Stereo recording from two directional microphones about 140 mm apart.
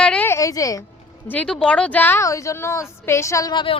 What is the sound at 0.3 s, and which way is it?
Speech, 20° left (ahead or behind).